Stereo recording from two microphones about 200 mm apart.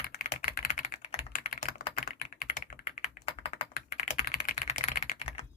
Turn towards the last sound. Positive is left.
turn(degrees=35)  # may be behind; listen again after turning